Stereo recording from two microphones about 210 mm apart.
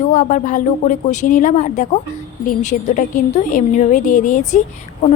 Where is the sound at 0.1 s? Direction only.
35° left (ahead or behind).